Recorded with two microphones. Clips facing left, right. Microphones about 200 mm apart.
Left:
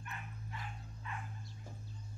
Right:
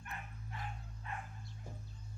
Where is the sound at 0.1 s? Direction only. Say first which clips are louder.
Right 1 dB; 45° right (ahead or behind).